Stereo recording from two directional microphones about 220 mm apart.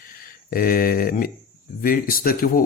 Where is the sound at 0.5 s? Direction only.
40° left (ahead or behind).